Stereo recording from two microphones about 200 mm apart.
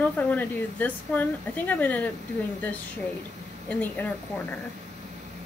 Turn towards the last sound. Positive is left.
turn(degrees=10)  # may be behind; listen again after turning